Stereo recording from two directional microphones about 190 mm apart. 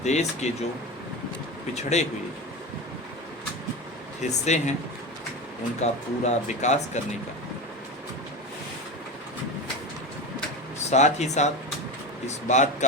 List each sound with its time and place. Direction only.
0.0 s speech: 35° left (ahead or behind)
1.7 s speech: 35° left (ahead or behind)
4.2 s speech: 35° left (ahead or behind)
5.8 s speech: 35° left (ahead or behind)
10.9 s speech: 35° left (ahead or behind)